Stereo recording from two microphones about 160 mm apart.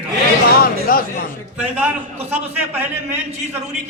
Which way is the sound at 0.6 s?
65° left (ahead or behind).